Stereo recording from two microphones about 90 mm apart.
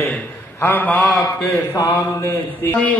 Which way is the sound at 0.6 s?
20° left (ahead or behind).